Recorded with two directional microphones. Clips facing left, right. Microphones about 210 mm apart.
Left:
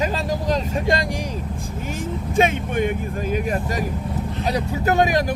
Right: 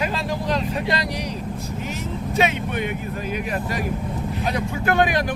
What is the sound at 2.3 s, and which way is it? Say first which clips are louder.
Speech: left 3 dB; 50° left (ahead or behind).